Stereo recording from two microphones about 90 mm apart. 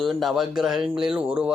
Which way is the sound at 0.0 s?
Centre (ahead or behind).